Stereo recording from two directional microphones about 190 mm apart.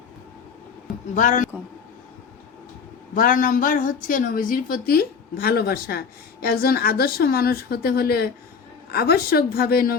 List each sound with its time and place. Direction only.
1.1 s speech: 40° left (ahead or behind)
3.2 s a woman's voice: 45° left (ahead or behind)